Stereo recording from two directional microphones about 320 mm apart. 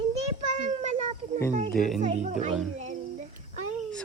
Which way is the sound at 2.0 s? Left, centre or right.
Right.